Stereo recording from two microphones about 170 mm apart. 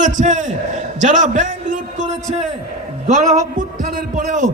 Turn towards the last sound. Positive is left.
turn(degrees=-50)  # may be behind; listen again after turning